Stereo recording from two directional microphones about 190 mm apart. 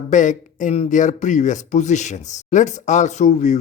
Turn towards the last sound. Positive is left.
turn(degrees=40)  # may be behind; listen again after turning